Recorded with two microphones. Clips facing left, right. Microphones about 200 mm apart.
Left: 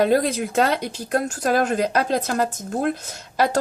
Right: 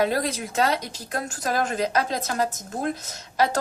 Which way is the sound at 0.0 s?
55° left (ahead or behind).